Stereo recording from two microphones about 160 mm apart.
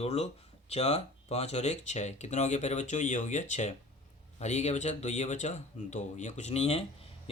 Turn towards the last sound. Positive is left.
turn(degrees=40)  # may be behind; listen again after turning